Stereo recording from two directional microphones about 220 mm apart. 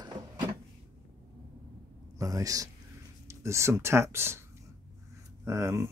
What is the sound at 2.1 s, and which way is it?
A man's voice, 15° right (ahead or behind).